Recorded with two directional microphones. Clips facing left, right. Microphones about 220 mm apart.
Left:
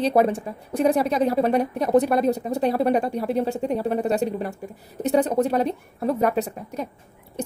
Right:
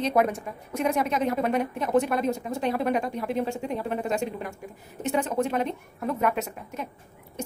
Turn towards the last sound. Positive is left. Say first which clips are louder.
# left 5 dB
turn(degrees=35)  # may be behind; listen again after turning